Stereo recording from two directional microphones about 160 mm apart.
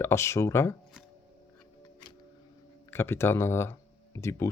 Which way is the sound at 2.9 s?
15° left (ahead or behind).